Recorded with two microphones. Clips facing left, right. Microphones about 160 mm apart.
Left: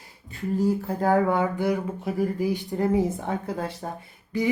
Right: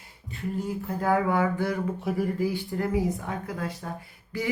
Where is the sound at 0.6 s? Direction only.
35° left (ahead or behind).